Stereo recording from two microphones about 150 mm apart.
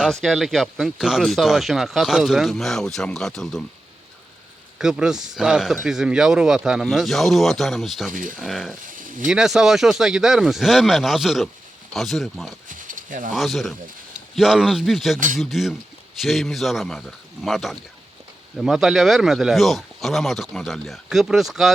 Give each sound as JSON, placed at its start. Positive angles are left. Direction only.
{"t": 0.0, "sound": "speech", "side_deg": 0}
{"t": 4.8, "sound": "speech", "side_deg": -5}
{"t": 8.1, "sound": "speech", "side_deg": -65}
{"t": 8.4, "sound": "speech", "side_deg": 0}
{"t": 8.9, "sound": "a sound", "side_deg": -65}
{"t": 9.2, "sound": "speech", "side_deg": -5}
{"t": 12.6, "sound": "a sound", "side_deg": -60}
{"t": 13.3, "sound": "speech", "side_deg": 0}